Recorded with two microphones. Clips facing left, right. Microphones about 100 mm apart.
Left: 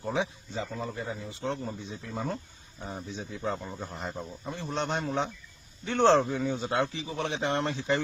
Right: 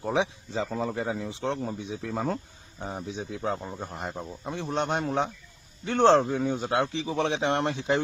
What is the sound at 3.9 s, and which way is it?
Speech, 10° right (ahead or behind).